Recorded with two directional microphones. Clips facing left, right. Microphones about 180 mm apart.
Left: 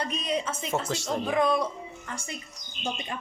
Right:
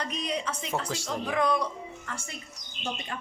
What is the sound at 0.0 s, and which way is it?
Speech, 25° left (ahead or behind).